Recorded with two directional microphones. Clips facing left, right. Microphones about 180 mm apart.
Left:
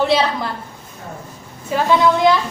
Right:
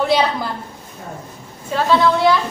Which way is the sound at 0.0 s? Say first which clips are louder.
Even; centre (ahead or behind).